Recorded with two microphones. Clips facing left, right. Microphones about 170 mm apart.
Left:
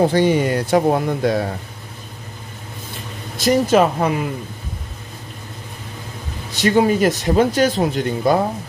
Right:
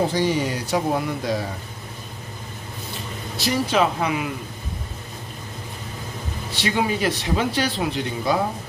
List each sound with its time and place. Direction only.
0.1 s speech: 60° left (ahead or behind)
3.3 s speech: 45° left (ahead or behind)
6.5 s speech: 45° left (ahead or behind)